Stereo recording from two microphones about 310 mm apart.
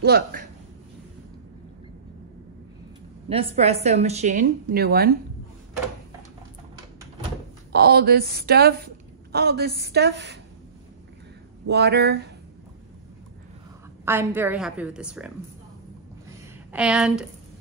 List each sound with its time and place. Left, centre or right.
0.0 s a woman's voice: right
3.3 s speech: centre
7.7 s a woman's voice: right
11.6 s a woman's voice: right
14.0 s a woman's voice: centre
16.7 s a woman's voice: centre